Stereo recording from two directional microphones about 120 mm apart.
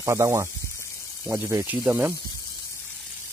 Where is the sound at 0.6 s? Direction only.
25° left (ahead or behind).